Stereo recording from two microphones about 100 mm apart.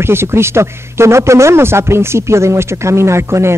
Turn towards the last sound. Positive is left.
turn(degrees=-25)  # may be behind; listen again after turning